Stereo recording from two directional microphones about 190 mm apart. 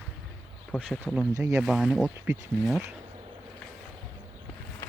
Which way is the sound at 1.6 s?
Centre (ahead or behind).